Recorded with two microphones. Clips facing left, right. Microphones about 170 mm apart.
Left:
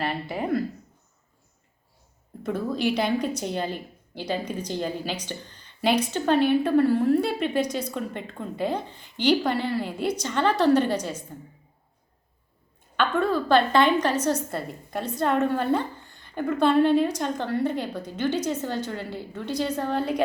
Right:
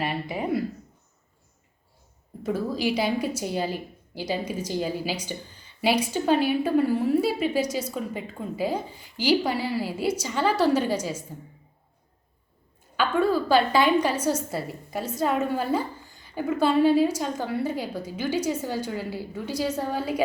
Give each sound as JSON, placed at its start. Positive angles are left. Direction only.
{"t": 0.0, "sound": "speech", "side_deg": -5}
{"t": 2.4, "sound": "a woman's voice", "side_deg": -5}
{"t": 13.0, "sound": "a woman's voice", "side_deg": -5}